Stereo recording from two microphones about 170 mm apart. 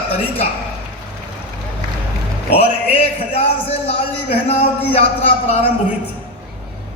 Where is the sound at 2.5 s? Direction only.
35° left (ahead or behind).